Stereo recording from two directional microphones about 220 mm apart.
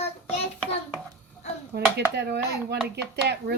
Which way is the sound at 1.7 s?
50° right (ahead or behind).